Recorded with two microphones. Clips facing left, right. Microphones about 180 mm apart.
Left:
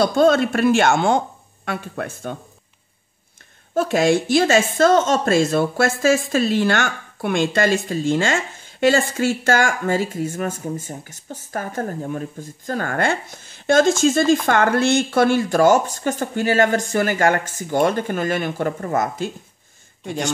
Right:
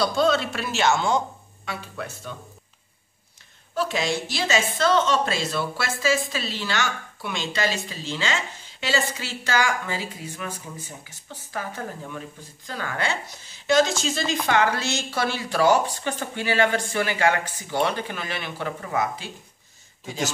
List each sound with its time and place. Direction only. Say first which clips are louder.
0.0 s a woman's voice: left 6 dB; 50° left (ahead or behind)
3.7 s a woman's voice: left 8 dB; 50° left (ahead or behind)